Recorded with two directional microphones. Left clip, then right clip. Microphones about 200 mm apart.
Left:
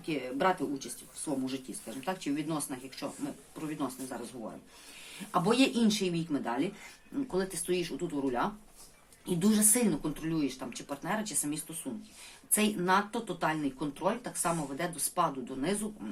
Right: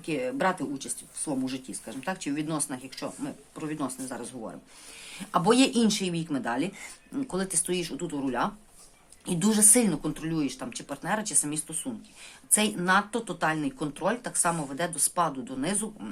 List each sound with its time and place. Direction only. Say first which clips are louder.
0.0 s speech: right 3 dB; 45° right (ahead or behind)